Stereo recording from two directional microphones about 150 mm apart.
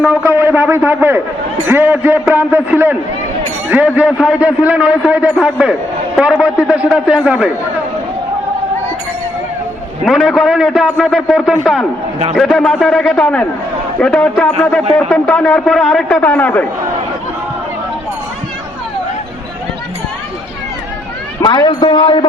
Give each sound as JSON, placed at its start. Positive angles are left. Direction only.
{"t": 0.0, "sound": "a man's voice", "side_deg": -5}
{"t": 10.1, "sound": "a man's voice", "side_deg": 0}
{"t": 21.4, "sound": "a man's voice", "side_deg": 25}